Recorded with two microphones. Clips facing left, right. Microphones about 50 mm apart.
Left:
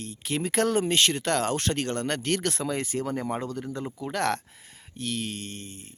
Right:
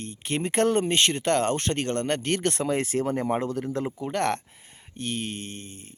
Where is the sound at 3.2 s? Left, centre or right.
Centre; by 6.0 s right.